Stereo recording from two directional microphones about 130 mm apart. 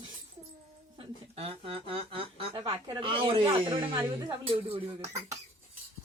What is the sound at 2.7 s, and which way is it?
Speech, 30° right (ahead or behind).